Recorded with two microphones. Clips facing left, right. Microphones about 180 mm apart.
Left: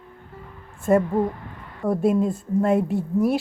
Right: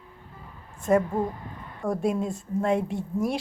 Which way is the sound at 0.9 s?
Centre (ahead or behind).